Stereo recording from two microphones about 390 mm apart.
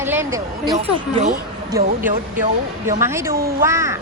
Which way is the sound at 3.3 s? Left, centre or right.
Right.